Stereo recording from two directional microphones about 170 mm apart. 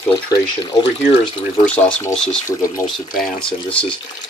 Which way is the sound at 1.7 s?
10° left (ahead or behind).